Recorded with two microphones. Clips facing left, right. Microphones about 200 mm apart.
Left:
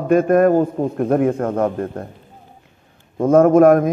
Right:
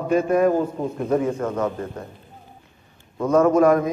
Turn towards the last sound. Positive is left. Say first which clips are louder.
# left 5 dB
turn(degrees=50)  # may be behind; listen again after turning